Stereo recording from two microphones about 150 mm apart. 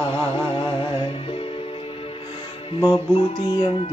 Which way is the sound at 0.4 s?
35° left (ahead or behind).